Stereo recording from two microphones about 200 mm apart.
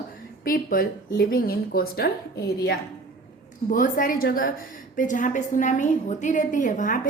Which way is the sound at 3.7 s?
40° left (ahead or behind).